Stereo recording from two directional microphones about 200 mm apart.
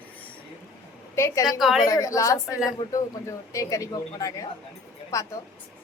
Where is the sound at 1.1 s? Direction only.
15° left (ahead or behind).